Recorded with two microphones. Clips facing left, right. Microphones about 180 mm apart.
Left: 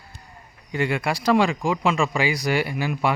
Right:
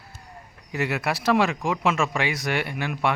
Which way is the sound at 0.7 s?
5° right (ahead or behind).